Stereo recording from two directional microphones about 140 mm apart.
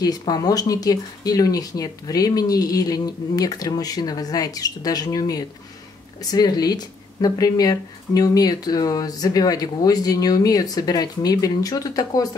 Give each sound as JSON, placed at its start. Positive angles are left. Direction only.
{"t": 0.0, "sound": "speech", "side_deg": 30}